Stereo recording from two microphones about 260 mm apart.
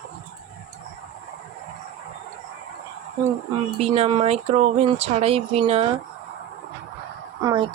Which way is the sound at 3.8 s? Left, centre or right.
Right.